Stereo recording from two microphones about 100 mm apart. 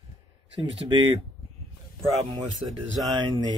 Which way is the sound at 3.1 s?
45° right (ahead or behind).